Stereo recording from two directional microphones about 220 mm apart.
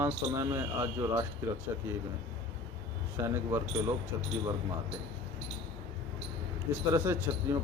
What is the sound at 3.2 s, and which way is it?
Speech, 15° right (ahead or behind).